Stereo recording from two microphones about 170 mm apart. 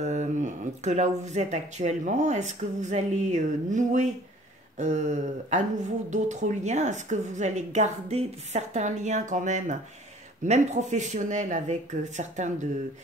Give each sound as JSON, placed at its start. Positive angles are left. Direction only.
{"t": 0.0, "sound": "speech", "side_deg": -45}